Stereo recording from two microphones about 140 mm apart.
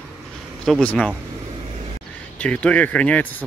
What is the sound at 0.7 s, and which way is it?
Speech, 10° left (ahead or behind).